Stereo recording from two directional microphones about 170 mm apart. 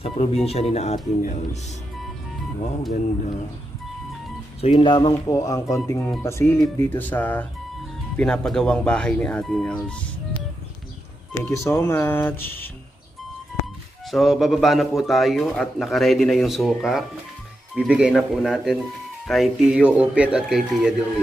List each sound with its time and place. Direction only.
0.0 s speech: 40° left (ahead or behind)
4.6 s a man's voice: 30° left (ahead or behind); by 10.0 s 5° left (ahead or behind)
11.3 s speech: 15° left (ahead or behind)
14.1 s a man's voice: centre (ahead or behind)